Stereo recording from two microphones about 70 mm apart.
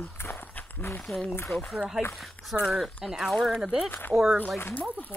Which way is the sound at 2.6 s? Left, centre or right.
Centre.